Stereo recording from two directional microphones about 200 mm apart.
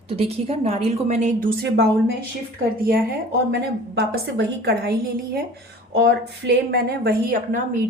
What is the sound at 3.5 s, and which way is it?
A woman's voice, 70° right (ahead or behind).